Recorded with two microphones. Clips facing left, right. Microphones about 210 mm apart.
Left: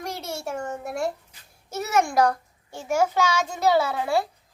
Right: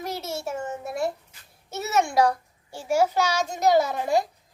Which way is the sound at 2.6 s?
30° right (ahead or behind).